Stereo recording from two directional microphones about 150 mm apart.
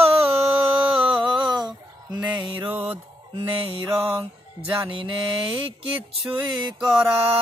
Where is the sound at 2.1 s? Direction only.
40° right (ahead or behind).